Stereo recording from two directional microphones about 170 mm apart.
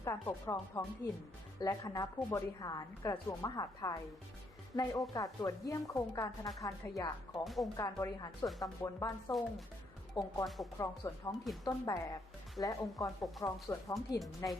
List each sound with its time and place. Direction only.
0.0 s speech: 15° left (ahead or behind)
7.4 s speech: centre (ahead or behind)
7.8 s speech: 20° left (ahead or behind)